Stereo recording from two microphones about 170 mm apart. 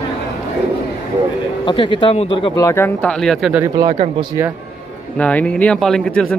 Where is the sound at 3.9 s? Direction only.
35° right (ahead or behind).